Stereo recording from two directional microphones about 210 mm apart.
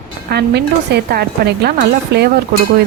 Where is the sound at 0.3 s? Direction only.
50° right (ahead or behind).